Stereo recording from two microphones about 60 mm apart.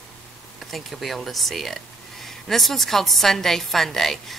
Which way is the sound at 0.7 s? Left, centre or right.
Centre.